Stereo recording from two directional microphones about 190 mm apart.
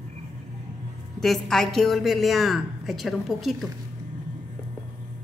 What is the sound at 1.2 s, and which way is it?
A woman's voice, centre (ahead or behind).